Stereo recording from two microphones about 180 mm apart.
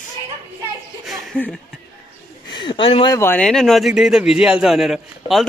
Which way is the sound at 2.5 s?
25° left (ahead or behind).